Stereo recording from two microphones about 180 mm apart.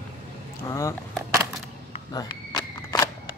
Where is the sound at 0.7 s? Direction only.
15° left (ahead or behind).